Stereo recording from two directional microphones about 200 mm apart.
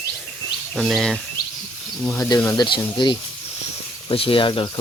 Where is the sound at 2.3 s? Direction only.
15° left (ahead or behind).